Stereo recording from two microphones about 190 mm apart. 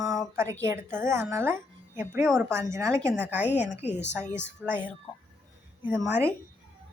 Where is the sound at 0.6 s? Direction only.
15° right (ahead or behind).